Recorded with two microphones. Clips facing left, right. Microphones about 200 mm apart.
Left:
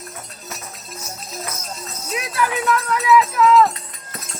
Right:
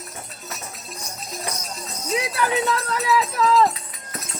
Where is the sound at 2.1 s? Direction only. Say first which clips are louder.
Even; 25° right (ahead or behind).